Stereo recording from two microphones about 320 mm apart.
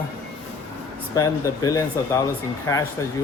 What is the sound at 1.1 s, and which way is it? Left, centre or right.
Speech, centre.